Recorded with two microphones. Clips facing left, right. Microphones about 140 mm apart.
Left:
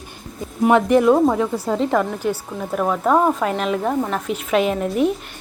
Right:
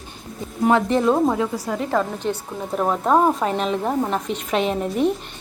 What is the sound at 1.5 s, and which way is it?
Speech, 25° left (ahead or behind).